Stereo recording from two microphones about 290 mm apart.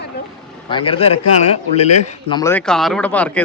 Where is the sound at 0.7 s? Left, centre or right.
Centre.